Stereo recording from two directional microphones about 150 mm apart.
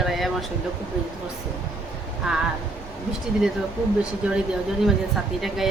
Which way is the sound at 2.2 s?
5° right (ahead or behind).